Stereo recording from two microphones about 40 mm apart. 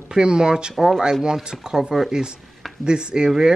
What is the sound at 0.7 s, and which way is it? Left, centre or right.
Speech, centre.